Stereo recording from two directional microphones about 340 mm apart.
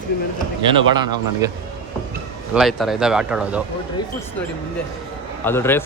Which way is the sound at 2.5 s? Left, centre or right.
Centre.